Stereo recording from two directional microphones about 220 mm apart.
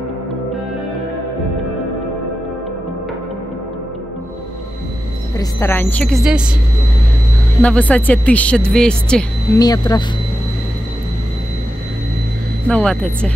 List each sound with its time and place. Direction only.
5.4 s a woman's voice: 10° left (ahead or behind)
7.6 s speech: 5° left (ahead or behind)
9.6 s a woman's voice: 15° left (ahead or behind)
12.6 s speech: 5° left (ahead or behind)